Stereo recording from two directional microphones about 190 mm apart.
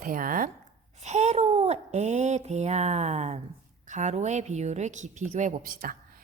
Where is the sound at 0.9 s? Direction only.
35° right (ahead or behind).